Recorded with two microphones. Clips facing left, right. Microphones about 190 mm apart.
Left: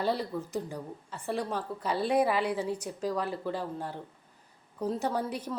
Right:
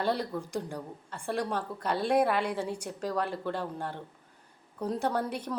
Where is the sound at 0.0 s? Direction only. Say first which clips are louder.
Even; 5° left (ahead or behind).